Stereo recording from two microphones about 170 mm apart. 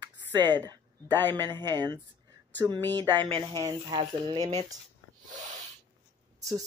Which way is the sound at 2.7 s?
10° left (ahead or behind).